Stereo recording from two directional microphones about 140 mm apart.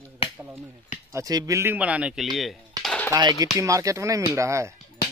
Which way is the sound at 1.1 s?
25° right (ahead or behind).